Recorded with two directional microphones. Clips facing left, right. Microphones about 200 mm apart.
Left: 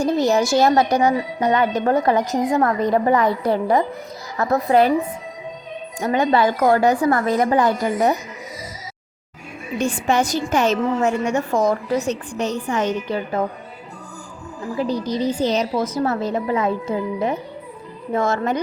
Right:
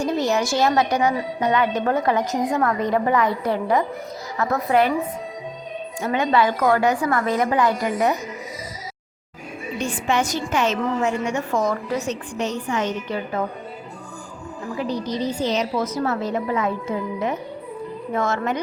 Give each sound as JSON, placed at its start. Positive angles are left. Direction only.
{"t": 0.0, "sound": "a woman's voice", "side_deg": 35}
{"t": 6.0, "sound": "a woman's voice", "side_deg": 40}
{"t": 9.7, "sound": "a woman's voice", "side_deg": 45}
{"t": 14.8, "sound": "a woman's voice", "side_deg": 35}